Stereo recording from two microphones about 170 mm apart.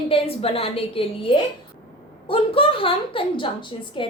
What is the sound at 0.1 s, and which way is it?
A child's voice, 35° left (ahead or behind).